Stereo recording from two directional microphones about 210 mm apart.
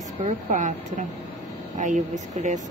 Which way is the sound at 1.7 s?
35° right (ahead or behind).